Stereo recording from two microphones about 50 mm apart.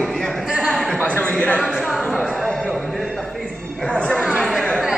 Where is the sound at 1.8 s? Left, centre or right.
Centre.